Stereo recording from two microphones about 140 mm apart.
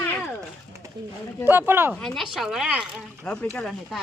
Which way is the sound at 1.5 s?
15° right (ahead or behind).